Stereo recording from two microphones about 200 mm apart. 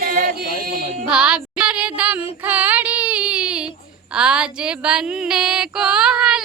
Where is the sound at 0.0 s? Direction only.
45° right (ahead or behind).